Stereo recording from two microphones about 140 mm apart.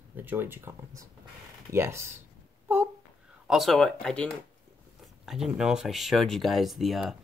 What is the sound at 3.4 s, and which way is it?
Speech, centre (ahead or behind).